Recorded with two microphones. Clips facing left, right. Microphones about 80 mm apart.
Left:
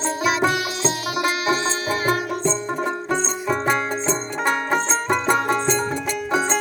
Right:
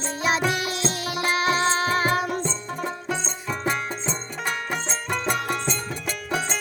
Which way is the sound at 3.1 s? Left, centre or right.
Left.